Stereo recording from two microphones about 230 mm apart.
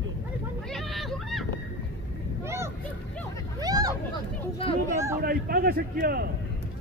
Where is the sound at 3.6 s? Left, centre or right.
Centre.